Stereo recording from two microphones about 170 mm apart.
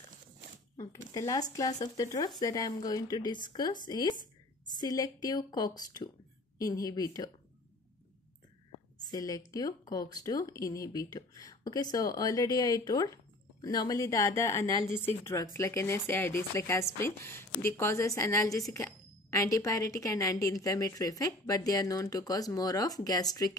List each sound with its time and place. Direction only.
1.1 s speech: 20° left (ahead or behind)
9.1 s a woman's voice: 20° left (ahead or behind)